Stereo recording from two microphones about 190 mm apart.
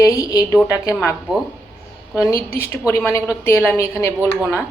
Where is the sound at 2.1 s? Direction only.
15° left (ahead or behind).